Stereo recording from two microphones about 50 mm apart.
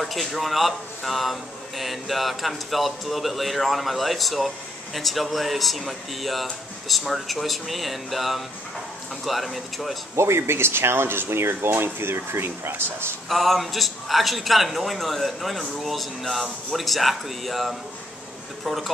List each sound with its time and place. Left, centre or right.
0.0 s speech: centre
10.1 s speech: right
13.3 s speech: centre